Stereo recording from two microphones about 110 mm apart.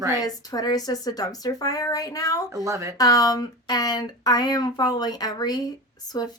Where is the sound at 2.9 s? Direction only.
35° left (ahead or behind).